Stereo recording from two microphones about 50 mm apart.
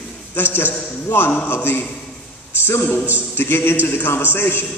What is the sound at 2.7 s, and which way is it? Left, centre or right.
A man's voice, left.